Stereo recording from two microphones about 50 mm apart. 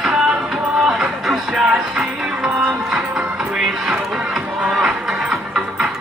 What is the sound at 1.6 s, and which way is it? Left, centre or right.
Music, centre.